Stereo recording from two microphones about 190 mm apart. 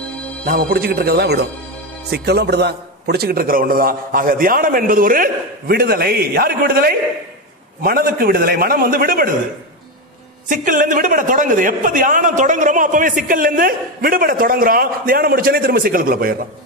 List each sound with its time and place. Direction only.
0.5 s a man's voice: 50° right (ahead or behind)
10.5 s a man's voice: 45° right (ahead or behind)